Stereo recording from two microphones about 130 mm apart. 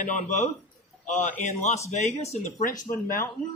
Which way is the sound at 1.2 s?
65° left (ahead or behind).